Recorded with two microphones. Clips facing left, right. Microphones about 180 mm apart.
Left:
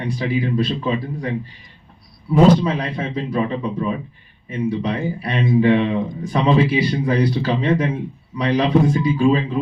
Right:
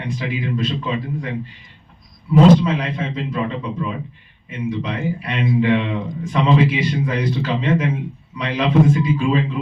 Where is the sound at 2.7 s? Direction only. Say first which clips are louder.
Even; 35° left (ahead or behind).